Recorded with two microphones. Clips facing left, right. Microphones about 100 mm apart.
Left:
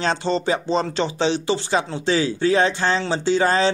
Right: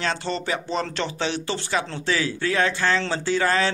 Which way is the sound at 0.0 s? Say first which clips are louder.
Left 5 dB; 25° left (ahead or behind).